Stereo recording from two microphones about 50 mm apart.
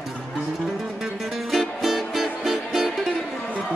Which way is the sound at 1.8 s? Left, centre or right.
Centre.